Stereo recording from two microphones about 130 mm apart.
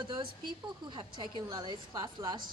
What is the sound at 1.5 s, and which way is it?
Speech, 35° right (ahead or behind).